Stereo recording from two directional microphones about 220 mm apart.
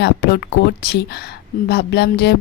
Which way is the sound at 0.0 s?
50° left (ahead or behind).